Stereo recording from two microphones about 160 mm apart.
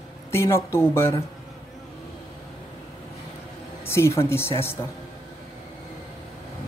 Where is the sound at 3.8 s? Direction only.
15° left (ahead or behind).